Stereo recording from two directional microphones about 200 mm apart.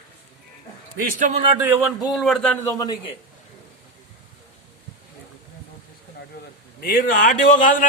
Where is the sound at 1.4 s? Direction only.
20° right (ahead or behind); by 3.1 s 20° left (ahead or behind).